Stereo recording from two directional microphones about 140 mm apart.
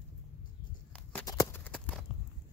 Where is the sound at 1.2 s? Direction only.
25° left (ahead or behind).